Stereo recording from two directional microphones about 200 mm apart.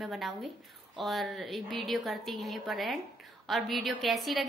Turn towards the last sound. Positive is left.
turn(degrees=0)  # may be behind; listen again after turning